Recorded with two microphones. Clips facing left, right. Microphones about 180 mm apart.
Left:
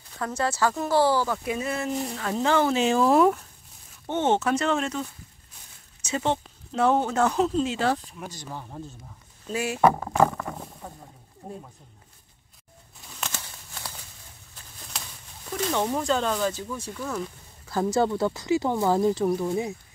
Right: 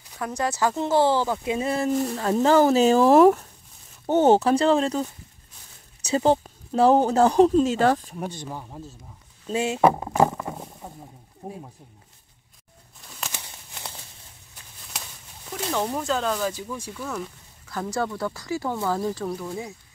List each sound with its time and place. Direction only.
0.2 s speech: 15° right (ahead or behind); by 3.0 s 40° right (ahead or behind)
3.0 s speech: 65° right (ahead or behind)
4.0 s speech: 40° right (ahead or behind)
6.0 s speech: 35° right (ahead or behind)
7.4 s speech: 50° right (ahead or behind)
8.5 s speech: centre (ahead or behind)
9.5 s speech: 25° right (ahead or behind)
13.3 s crumpling: 20° right (ahead or behind)
15.7 s speech: centre (ahead or behind)
16.5 s speech: 10° right (ahead or behind)
17.6 s speech: 25° left (ahead or behind)